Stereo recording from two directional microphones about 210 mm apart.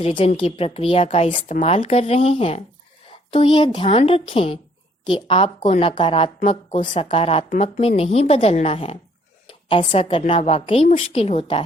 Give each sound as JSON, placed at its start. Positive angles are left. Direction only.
{"t": 0.0, "sound": "a woman's voice", "side_deg": 25}